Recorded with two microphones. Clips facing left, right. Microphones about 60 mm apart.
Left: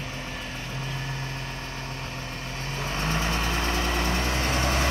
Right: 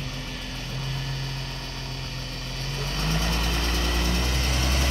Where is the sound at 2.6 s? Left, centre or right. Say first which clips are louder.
Left 1 dB; left.